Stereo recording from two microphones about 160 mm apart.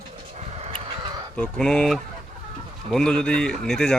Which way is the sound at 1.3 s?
5° left (ahead or behind).